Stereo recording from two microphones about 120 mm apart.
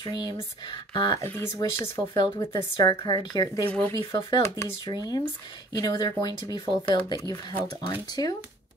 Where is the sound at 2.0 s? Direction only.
35° left (ahead or behind).